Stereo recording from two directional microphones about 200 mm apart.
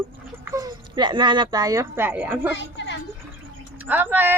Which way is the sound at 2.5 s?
60° left (ahead or behind).